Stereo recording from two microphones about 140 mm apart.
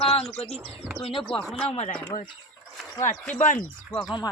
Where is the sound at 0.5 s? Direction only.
5° left (ahead or behind).